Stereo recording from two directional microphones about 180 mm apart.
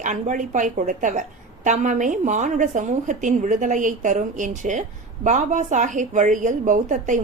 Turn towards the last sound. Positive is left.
turn(degrees=-45)  # may be behind; listen again after turning